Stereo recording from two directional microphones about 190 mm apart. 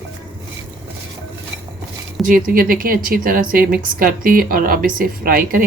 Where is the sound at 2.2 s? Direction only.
50° right (ahead or behind).